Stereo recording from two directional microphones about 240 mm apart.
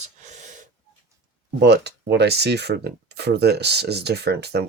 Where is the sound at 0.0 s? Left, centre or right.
Right.